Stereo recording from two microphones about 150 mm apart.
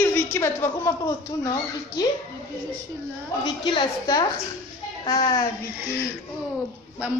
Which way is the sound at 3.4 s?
30° left (ahead or behind).